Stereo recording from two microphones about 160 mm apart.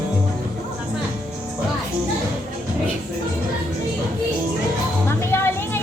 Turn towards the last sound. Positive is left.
turn(degrees=15)  # may be behind; listen again after turning